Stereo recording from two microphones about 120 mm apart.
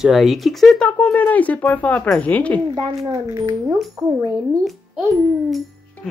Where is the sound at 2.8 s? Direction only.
40° right (ahead or behind).